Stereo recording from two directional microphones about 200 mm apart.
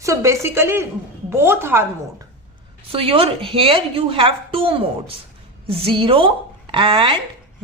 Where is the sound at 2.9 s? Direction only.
30° right (ahead or behind).